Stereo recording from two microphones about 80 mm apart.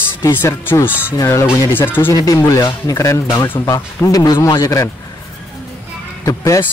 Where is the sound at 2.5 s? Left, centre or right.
Left.